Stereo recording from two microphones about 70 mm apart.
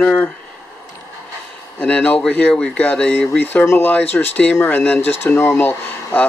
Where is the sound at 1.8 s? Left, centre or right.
Left.